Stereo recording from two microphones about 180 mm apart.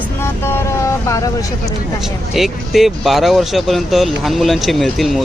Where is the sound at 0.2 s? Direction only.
15° left (ahead or behind).